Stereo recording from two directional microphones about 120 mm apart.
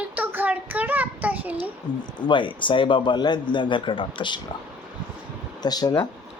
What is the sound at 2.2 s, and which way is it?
A man's voice, 40° left (ahead or behind).